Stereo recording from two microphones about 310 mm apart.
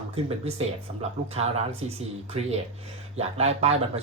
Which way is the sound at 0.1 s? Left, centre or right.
Centre.